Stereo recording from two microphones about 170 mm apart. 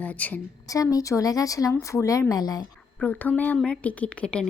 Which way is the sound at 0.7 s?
20° left (ahead or behind).